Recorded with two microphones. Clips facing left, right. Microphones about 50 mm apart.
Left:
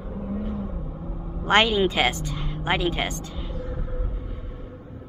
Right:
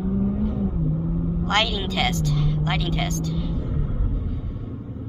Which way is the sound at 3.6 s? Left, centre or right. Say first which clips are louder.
Right 4 dB; centre.